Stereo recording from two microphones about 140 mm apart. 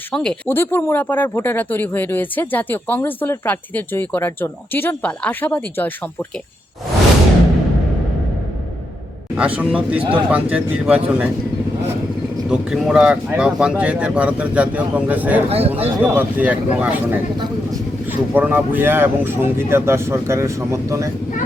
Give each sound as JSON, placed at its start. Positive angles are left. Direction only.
{"t": 0.1, "sound": "speech", "side_deg": 5}
{"t": 9.6, "sound": "speech", "side_deg": -10}
{"t": 10.0, "sound": "speech", "side_deg": -40}
{"t": 10.5, "sound": "speech", "side_deg": -10}
{"t": 12.5, "sound": "speech", "side_deg": -5}
{"t": 15.4, "sound": "speech", "side_deg": -45}
{"t": 16.0, "sound": "speech", "side_deg": -10}